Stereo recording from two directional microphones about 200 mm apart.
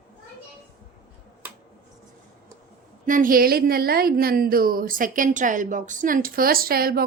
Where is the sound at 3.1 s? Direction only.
45° right (ahead or behind).